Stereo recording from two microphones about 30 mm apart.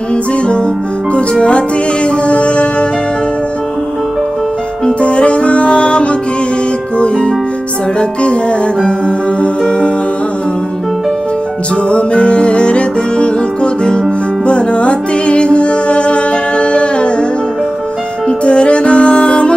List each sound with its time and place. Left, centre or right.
2.0 s music: left
5.0 s music: left
11.9 s music: left
14.4 s music: left
18.4 s music: left